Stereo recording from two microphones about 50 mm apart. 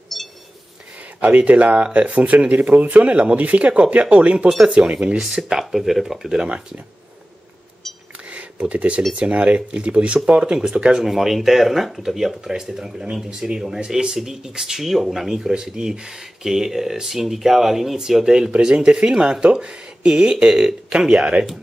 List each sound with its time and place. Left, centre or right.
1.2 s speech: right
5.2 s speech: centre
8.3 s a sound: right
9.1 s speech: right